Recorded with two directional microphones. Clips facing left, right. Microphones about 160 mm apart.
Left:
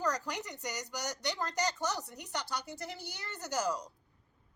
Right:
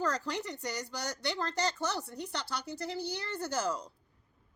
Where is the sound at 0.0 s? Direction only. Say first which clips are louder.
Right 2 dB; 15° left (ahead or behind).